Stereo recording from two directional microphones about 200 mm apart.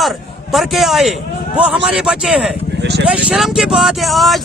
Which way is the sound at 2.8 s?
55° right (ahead or behind).